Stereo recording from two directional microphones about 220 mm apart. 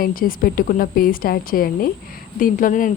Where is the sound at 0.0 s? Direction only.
40° left (ahead or behind).